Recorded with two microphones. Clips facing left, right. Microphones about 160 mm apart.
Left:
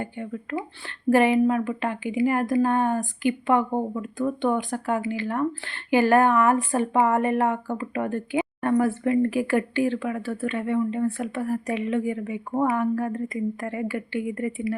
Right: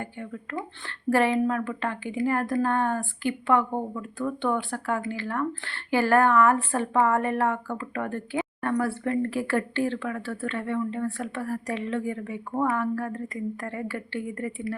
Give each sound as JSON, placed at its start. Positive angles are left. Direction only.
{"t": 0.2, "sound": "speech", "side_deg": 20}